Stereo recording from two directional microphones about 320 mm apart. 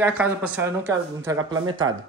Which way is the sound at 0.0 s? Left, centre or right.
Centre.